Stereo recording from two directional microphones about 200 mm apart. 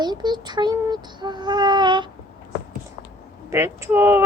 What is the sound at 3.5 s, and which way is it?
Speech, 15° right (ahead or behind).